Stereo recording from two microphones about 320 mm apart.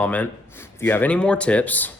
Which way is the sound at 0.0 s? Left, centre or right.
Centre.